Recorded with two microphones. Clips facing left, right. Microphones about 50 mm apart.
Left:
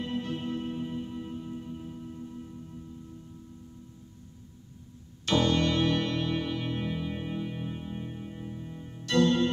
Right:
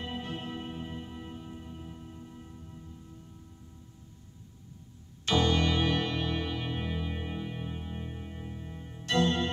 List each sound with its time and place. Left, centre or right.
0.2 s music: centre
5.2 s music: centre
9.0 s music: right